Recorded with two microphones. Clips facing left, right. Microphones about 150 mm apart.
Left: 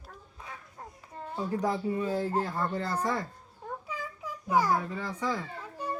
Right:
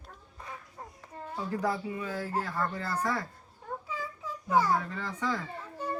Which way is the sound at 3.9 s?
15° left (ahead or behind).